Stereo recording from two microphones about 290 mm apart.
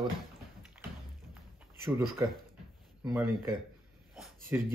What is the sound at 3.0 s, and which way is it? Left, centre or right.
Speech, centre.